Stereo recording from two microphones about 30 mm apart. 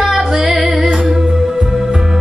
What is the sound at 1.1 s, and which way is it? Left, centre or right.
Music, centre.